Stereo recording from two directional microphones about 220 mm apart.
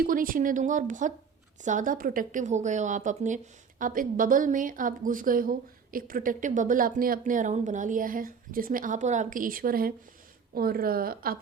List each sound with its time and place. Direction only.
0.0 s a woman's voice: 40° right (ahead or behind)